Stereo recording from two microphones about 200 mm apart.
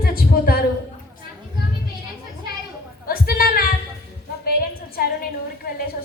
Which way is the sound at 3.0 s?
50° left (ahead or behind).